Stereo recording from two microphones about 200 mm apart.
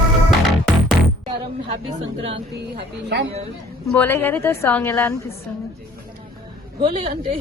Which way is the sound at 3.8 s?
5° left (ahead or behind).